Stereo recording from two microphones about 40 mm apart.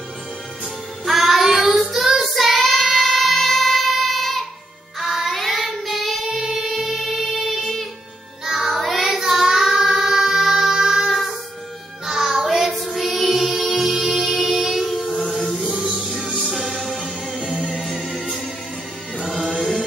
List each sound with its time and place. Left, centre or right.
1.0 s music: centre
1.9 s child singing: centre
5.0 s child singing: centre
8.5 s music: centre
8.7 s child singing: centre
12.6 s choir: centre
13.8 s music: centre
15.2 s music: centre
17.4 s music: left
19.2 s music: centre